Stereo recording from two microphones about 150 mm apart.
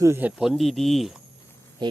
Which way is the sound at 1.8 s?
30° right (ahead or behind).